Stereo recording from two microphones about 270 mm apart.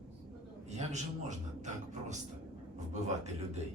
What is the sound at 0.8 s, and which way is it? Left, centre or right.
A man's voice, right.